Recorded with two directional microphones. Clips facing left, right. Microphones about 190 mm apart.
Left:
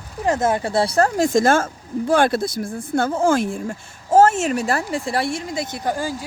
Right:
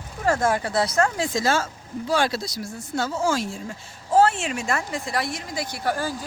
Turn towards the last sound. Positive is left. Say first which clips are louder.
# left 2 dB
turn(degrees=15)  # may be behind; listen again after turning